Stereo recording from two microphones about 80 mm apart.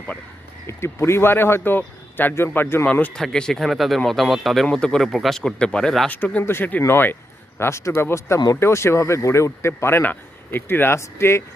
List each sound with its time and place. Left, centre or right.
0.7 s speech: left
2.8 s speech: centre
3.2 s speech: centre
5.0 s speech: centre
6.1 s speech: centre